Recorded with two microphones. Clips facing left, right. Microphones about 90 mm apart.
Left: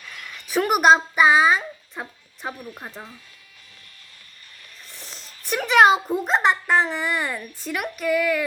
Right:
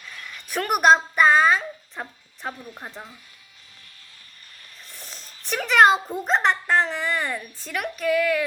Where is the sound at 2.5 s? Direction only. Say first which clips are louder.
Left 2 dB; 20° left (ahead or behind).